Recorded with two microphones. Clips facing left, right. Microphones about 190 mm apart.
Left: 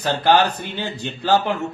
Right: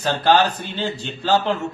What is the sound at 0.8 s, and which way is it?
Speech, 55° left (ahead or behind).